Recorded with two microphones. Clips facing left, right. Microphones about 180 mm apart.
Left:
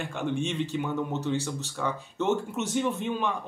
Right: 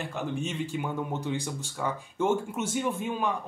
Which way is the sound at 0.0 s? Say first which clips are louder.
Left 2 dB; 5° right (ahead or behind).